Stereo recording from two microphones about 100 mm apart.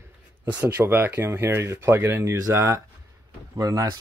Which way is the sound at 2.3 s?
35° right (ahead or behind).